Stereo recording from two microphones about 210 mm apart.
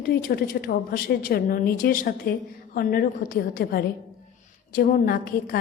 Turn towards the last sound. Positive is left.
turn(degrees=45)  # may be behind; listen again after turning